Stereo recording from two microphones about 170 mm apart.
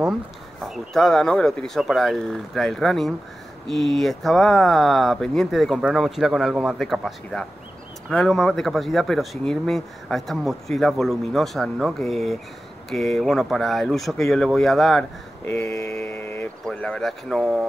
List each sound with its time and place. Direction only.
0.7 s speech: centre (ahead or behind)
15.4 s mantra: 15° left (ahead or behind)
16.6 s speech: 5° left (ahead or behind)